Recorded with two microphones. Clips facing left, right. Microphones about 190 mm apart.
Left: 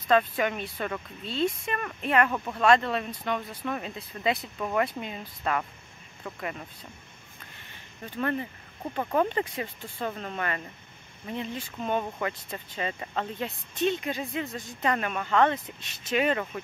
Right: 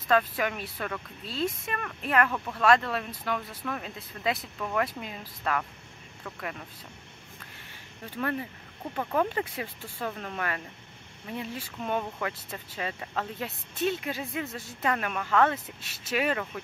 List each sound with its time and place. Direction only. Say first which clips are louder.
0.1 s speech: left 2 dB; centre (ahead or behind)
2.3 s speech: left 2 dB; 15° left (ahead or behind)
2.6 s speech: left 1 dB; centre (ahead or behind)
8.0 s speech: left 2 dB; 5° right (ahead or behind)